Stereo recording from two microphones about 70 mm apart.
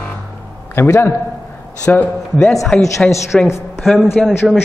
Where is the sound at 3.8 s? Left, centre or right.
Centre.